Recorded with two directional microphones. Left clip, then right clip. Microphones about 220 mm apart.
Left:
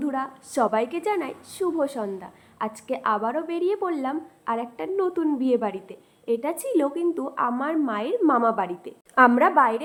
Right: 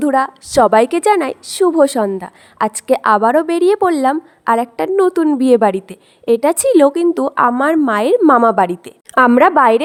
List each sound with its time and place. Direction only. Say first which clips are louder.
0.0 s a woman's voice: right 14 dB; 50° right (ahead or behind)